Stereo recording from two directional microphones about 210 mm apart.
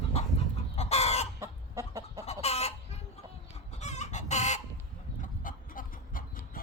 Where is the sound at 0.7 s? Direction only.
30° left (ahead or behind).